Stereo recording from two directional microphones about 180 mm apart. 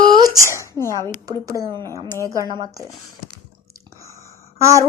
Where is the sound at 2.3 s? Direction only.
20° right (ahead or behind).